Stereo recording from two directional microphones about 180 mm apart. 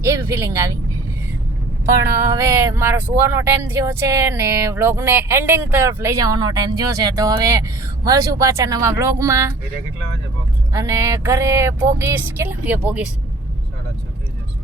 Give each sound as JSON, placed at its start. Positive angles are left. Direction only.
{"t": 0.0, "sound": "speech", "side_deg": -15}
{"t": 2.0, "sound": "speech", "side_deg": -15}
{"t": 10.7, "sound": "speech", "side_deg": -20}